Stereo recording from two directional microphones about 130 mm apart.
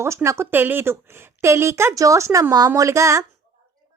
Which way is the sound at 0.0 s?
20° right (ahead or behind).